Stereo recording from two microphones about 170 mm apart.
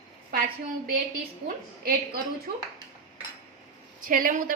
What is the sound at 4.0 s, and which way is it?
Speech, 55° right (ahead or behind).